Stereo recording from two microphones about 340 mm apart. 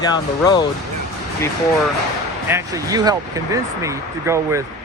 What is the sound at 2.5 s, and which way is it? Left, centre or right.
Speech, centre.